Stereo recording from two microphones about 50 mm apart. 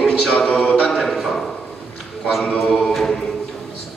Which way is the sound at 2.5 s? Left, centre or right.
Centre.